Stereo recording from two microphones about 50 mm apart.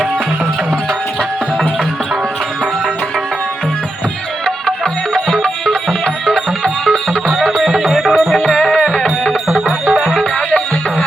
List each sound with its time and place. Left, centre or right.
4.4 s music: centre
7.9 s music: centre